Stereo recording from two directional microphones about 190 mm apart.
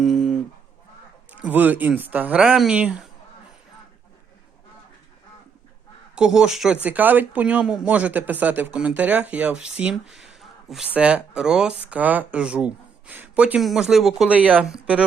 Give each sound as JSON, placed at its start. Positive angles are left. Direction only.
{"t": 0.0, "sound": "a sound", "side_deg": 0}
{"t": 1.3, "sound": "speech", "side_deg": -10}
{"t": 6.1, "sound": "speech", "side_deg": -5}